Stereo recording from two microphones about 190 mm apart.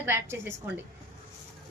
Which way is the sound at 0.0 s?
10° right (ahead or behind).